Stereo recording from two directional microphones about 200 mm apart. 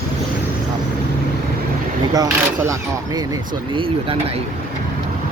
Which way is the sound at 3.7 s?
25° right (ahead or behind).